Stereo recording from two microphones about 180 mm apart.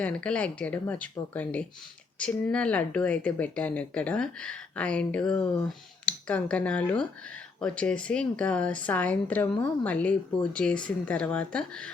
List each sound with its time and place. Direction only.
0.0 s speech: 5° left (ahead or behind)